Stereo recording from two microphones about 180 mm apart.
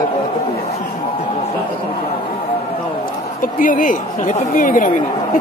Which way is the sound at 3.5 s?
50° left (ahead or behind).